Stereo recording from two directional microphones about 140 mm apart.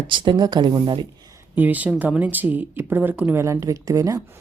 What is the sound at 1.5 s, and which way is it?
Speech, 10° right (ahead or behind).